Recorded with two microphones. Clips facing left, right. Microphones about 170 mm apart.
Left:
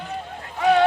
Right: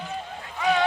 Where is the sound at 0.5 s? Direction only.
60° left (ahead or behind).